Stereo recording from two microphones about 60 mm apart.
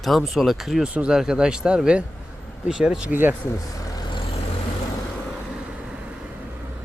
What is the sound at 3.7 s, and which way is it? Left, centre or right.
Vehicle, left.